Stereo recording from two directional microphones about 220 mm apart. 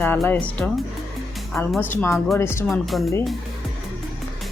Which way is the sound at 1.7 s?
10° left (ahead or behind).